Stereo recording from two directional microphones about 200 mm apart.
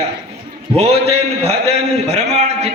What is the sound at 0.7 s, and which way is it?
A man's voice, 30° right (ahead or behind).